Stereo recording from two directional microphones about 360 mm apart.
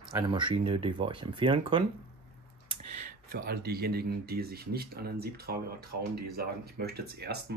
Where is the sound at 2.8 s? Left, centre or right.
Right.